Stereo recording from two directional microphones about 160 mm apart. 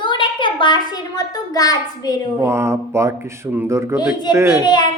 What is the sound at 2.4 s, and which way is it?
Speech, 15° right (ahead or behind).